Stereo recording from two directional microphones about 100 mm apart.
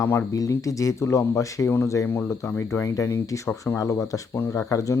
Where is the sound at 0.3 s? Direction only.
35° left (ahead or behind).